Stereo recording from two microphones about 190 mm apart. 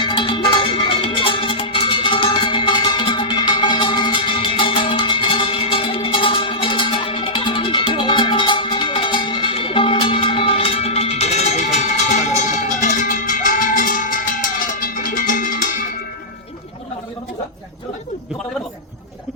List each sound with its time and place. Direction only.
0.0 s music: 25° left (ahead or behind); by 15.5 s 45° left (ahead or behind)